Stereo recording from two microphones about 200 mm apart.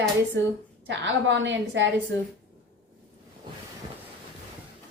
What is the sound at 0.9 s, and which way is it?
A woman's voice, 65° right (ahead or behind).